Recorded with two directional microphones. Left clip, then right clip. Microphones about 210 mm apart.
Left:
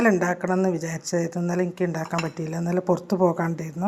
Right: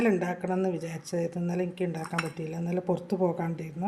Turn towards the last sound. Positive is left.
turn(degrees=15)  # may be behind; listen again after turning